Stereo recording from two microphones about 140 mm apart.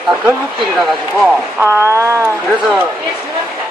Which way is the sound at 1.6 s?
20° right (ahead or behind).